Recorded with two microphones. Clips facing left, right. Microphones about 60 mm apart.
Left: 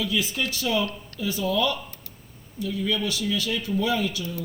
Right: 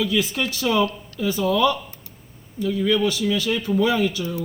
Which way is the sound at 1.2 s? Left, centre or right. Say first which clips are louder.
Right 5 dB; right.